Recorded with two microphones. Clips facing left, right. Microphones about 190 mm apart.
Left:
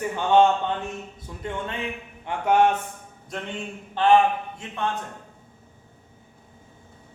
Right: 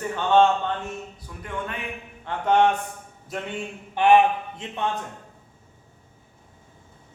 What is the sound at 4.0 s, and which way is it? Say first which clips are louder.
Speech: right 1 dB; 15° right (ahead or behind).